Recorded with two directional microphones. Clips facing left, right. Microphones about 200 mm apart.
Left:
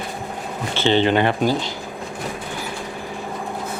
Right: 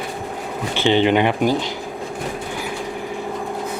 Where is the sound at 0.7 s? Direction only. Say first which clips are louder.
Right 1 dB; 15° right (ahead or behind).